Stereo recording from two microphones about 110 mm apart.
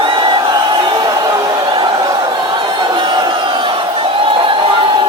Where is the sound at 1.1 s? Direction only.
35° right (ahead or behind).